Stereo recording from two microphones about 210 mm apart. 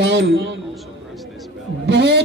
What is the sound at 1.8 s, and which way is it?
Speech, 50° right (ahead or behind).